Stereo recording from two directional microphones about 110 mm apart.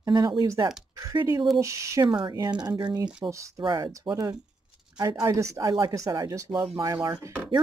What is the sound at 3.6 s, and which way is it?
Speech, 45° right (ahead or behind).